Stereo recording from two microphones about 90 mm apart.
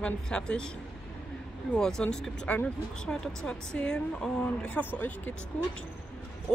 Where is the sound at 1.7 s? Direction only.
10° left (ahead or behind).